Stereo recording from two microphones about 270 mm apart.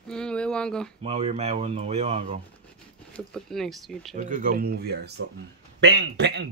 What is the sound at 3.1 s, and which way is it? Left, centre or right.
Speech, centre.